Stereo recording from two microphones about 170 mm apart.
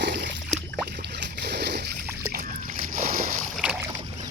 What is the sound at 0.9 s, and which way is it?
Boat, 80° right.